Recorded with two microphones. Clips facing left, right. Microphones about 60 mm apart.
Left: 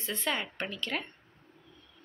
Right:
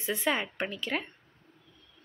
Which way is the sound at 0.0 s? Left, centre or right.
Centre.